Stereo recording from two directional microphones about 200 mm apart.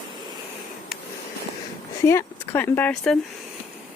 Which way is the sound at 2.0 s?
10° left (ahead or behind).